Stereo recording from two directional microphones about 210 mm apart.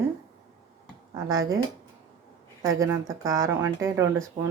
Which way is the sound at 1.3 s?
15° right (ahead or behind).